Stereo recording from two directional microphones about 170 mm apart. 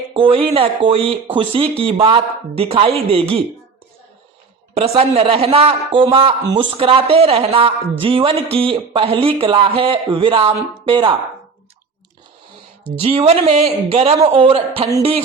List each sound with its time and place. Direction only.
0.1 s a man's voice: 30° right (ahead or behind)
4.9 s a man's voice: 35° right (ahead or behind)
13.0 s a man's voice: 35° right (ahead or behind)